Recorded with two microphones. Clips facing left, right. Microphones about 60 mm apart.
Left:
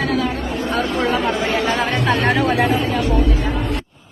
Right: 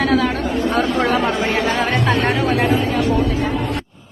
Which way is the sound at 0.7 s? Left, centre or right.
Right.